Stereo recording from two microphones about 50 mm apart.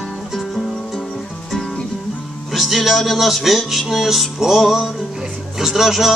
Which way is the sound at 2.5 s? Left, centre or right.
Centre.